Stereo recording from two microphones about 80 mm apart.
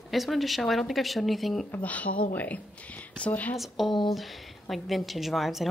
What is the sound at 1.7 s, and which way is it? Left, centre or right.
Speech, centre.